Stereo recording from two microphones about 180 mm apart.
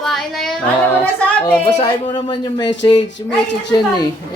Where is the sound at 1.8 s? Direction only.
25° left (ahead or behind).